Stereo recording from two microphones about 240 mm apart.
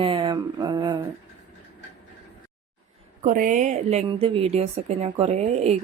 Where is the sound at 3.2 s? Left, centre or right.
Right.